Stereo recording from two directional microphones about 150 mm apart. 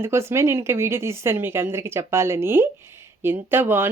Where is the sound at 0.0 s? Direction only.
15° right (ahead or behind).